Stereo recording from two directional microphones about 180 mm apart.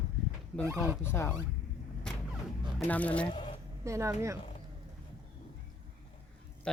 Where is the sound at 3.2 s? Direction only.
25° left (ahead or behind).